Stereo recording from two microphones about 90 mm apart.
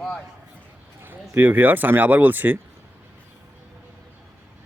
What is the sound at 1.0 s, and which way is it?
Speech, 25° right (ahead or behind).